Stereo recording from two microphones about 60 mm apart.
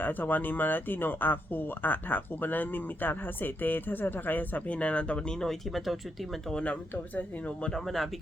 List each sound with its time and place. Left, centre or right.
0.0 s speech: left; by 6.4 s centre
6.5 s speech: centre
6.9 s speech: left
7.6 s speech: centre